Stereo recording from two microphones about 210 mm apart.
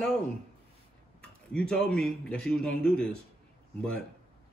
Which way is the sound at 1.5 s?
5° left (ahead or behind).